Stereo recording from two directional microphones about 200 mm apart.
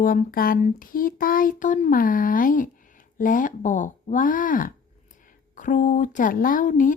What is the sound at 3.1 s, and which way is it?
Speech, 40° left (ahead or behind).